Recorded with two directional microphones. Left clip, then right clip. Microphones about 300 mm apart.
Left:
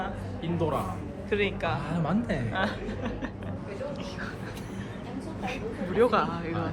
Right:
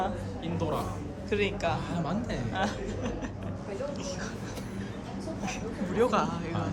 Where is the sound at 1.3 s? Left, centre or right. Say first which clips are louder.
Left 1 dB; centre.